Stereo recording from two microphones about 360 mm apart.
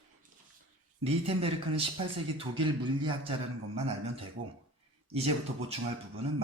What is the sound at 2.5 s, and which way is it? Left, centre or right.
Speech, centre.